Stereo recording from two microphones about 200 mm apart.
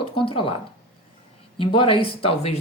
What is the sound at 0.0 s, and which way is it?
Speech, 25° left (ahead or behind).